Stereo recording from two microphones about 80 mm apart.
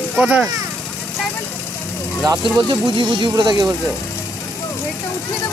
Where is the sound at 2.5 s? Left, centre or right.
Right.